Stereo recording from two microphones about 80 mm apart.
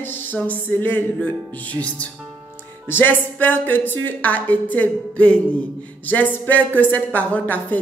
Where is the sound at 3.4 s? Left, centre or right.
Left.